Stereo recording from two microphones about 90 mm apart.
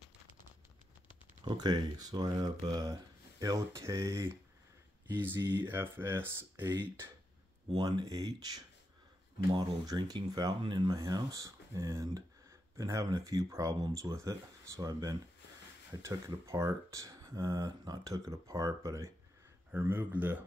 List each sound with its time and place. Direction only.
1.4 s speech: 55° right (ahead or behind); by 4.3 s 35° right (ahead or behind)
5.1 s speech: 25° right (ahead or behind)
7.7 s speech: 55° right (ahead or behind)
10.6 s speech: 65° right (ahead or behind)
10.9 s speech: 45° right (ahead or behind)
16.4 s speech: 35° right (ahead or behind)
19.7 s speech: 20° right (ahead or behind)